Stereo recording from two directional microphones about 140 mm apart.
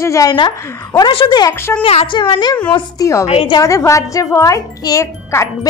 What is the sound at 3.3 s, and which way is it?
Speech, 40° left (ahead or behind).